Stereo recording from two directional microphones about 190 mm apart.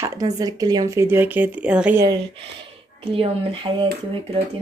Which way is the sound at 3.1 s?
30° right (ahead or behind).